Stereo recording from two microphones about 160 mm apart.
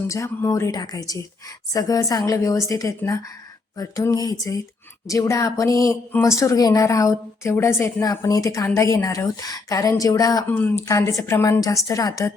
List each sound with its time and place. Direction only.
0.1 s a woman's voice: 20° left (ahead or behind)
10.5 s a woman's voice: 10° left (ahead or behind)